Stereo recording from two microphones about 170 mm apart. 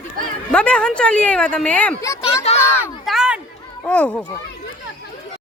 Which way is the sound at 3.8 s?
5° left (ahead or behind).